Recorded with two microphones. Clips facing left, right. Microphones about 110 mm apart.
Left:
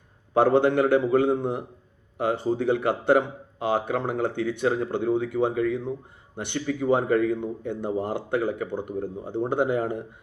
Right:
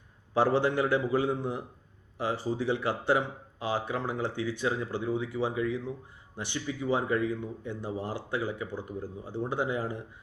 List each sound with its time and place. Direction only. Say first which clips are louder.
0.3 s speech: left 6 dB; 60° left (ahead or behind)